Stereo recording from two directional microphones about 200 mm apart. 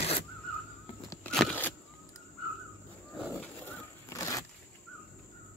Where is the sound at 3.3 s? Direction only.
15° left (ahead or behind).